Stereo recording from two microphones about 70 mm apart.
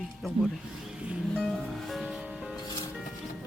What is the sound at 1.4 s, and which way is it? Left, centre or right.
Music, centre.